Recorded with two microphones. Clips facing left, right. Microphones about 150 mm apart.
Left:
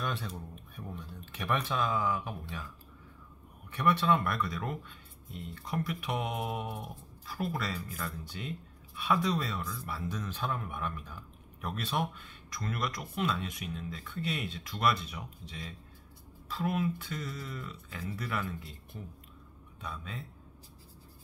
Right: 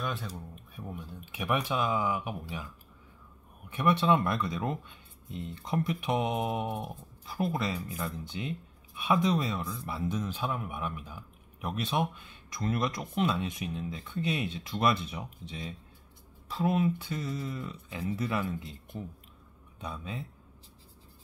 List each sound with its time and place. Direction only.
0.0 s a sound: centre (ahead or behind)
0.8 s speech: 15° right (ahead or behind)
3.7 s speech: 20° right (ahead or behind)